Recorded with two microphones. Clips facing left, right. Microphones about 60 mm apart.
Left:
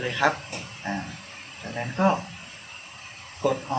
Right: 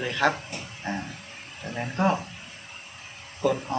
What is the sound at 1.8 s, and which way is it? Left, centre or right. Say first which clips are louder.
Speech: left 2 dB; centre.